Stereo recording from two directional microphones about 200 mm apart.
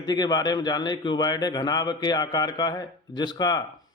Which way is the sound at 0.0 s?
20° left (ahead or behind).